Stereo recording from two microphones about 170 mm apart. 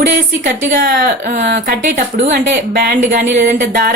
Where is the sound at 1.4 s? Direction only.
75° right (ahead or behind).